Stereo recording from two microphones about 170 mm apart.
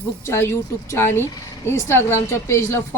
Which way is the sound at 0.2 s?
15° left (ahead or behind).